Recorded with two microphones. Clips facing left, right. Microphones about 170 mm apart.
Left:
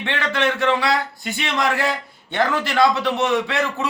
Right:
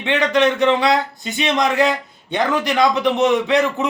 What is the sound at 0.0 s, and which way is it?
Speech, 20° right (ahead or behind).